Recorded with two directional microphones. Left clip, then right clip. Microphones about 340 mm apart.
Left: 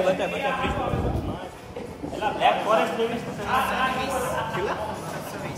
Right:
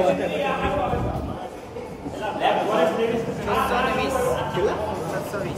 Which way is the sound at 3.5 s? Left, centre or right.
Centre.